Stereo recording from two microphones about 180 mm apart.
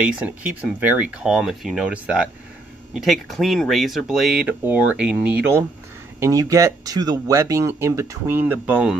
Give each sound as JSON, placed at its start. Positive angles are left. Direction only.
{"t": 0.0, "sound": "speech", "side_deg": -10}